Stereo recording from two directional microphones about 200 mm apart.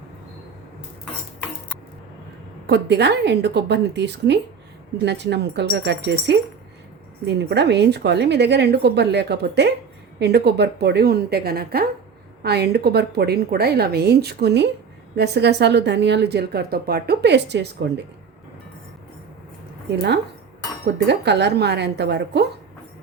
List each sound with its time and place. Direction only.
2.6 s a woman's voice: 55° right (ahead or behind)
20.8 s speech: 60° right (ahead or behind)